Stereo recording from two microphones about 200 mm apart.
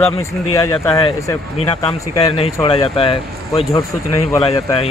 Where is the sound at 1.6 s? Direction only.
30° left (ahead or behind).